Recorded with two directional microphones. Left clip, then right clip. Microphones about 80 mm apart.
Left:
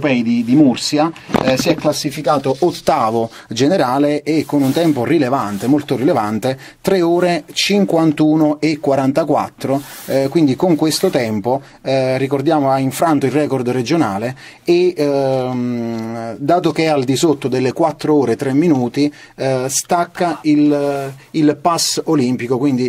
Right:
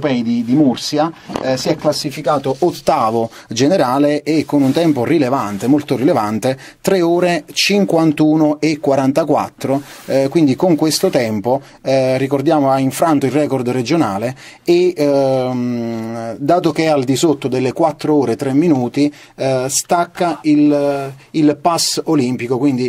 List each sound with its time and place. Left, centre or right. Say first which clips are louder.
0.0 s speech: left 1 dB; centre
1.5 s speech: even; right
1.8 s speech: even; centre
2.6 s speech: even; centre
3.5 s speech: right 1 dB; right